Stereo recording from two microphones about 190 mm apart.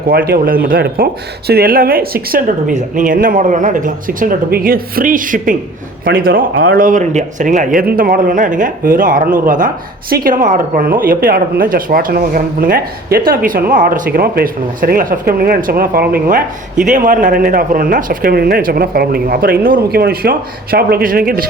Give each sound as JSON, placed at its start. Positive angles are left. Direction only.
{"t": 0.1, "sound": "speech", "side_deg": -50}